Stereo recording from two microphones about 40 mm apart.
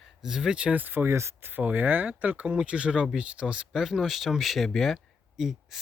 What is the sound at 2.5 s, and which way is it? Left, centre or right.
Speech, right.